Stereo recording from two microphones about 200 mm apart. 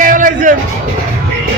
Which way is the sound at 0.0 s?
40° right (ahead or behind).